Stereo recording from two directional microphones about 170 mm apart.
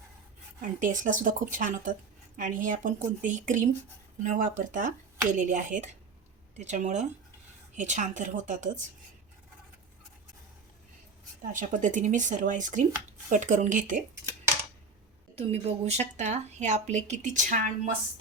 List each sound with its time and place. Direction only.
0.6 s a woman's voice: 50° right (ahead or behind)
11.4 s a woman's voice: 50° right (ahead or behind)
15.4 s a woman's voice: 40° right (ahead or behind)